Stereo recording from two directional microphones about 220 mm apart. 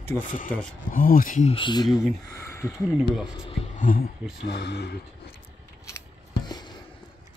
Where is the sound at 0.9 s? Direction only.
40° left (ahead or behind); by 2.0 s 20° left (ahead or behind).